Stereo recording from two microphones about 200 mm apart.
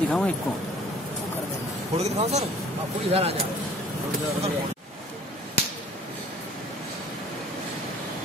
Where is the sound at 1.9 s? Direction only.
30° right (ahead or behind).